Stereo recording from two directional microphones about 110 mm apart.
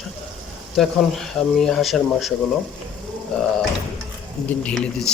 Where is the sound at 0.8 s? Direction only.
5° left (ahead or behind).